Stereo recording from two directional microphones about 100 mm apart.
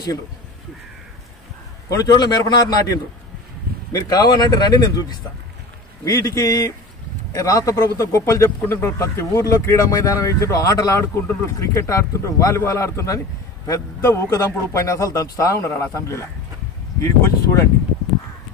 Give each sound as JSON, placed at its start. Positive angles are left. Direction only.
{"t": 1.9, "sound": "a man's voice", "side_deg": 35}
{"t": 11.0, "sound": "a man's voice", "side_deg": 25}